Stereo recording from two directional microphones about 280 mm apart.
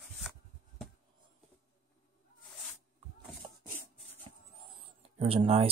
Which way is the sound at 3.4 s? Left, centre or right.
Centre.